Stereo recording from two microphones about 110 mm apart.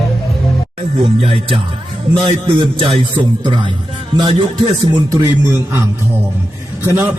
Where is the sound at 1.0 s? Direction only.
60° right (ahead or behind).